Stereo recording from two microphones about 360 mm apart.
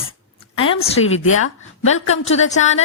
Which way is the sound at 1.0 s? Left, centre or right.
Left.